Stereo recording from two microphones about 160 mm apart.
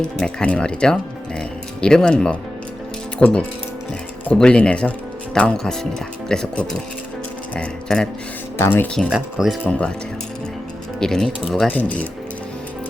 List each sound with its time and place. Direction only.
0.0 s speech: 5° left (ahead or behind)
9.0 s speech: centre (ahead or behind)
11.0 s speech: 5° left (ahead or behind)